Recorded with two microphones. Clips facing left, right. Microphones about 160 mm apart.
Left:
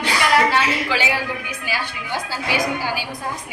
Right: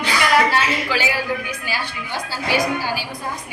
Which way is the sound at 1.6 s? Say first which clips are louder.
Even; 15° left (ahead or behind).